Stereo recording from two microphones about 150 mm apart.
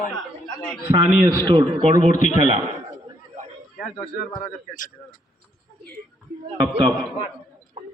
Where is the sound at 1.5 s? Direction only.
30° right (ahead or behind).